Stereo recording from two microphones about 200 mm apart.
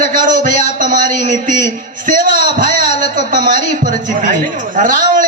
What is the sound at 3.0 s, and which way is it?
A man's voice, 40° right (ahead or behind).